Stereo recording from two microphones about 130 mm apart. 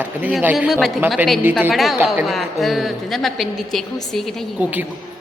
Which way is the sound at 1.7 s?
Centre (ahead or behind).